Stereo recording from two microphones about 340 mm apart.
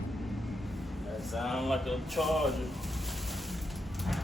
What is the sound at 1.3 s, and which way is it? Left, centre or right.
Speech, centre.